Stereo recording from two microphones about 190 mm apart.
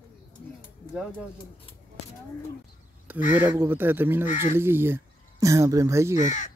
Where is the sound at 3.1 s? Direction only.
10° right (ahead or behind).